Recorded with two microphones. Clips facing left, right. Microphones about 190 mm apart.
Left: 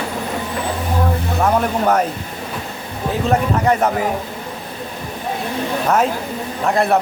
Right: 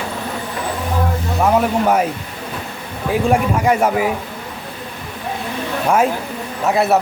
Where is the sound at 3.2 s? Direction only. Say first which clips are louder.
Even; 10° right (ahead or behind).